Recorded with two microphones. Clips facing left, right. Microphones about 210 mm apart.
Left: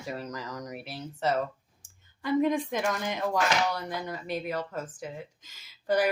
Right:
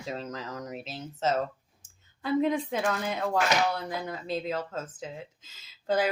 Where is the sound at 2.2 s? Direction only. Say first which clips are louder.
Left 1 dB; 15° left (ahead or behind).